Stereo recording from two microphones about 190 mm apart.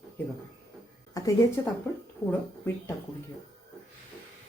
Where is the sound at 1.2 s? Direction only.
20° left (ahead or behind).